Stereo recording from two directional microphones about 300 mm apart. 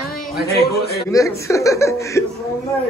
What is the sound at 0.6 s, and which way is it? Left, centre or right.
Speech, left.